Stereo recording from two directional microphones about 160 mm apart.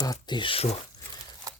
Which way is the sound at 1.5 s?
20° right (ahead or behind).